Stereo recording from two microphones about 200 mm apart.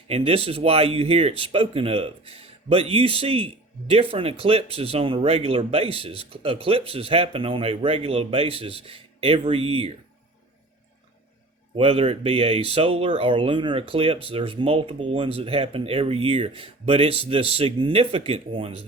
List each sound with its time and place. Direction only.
0.1 s speech: 30° right (ahead or behind)
11.8 s speech: 30° right (ahead or behind)